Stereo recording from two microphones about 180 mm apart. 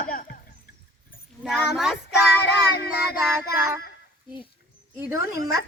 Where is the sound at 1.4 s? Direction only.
Centre (ahead or behind).